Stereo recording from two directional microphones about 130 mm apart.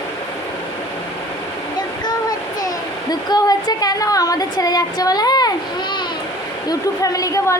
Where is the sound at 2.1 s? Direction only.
30° left (ahead or behind).